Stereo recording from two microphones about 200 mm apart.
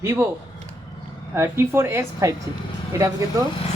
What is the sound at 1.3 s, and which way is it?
Speech, 10° right (ahead or behind).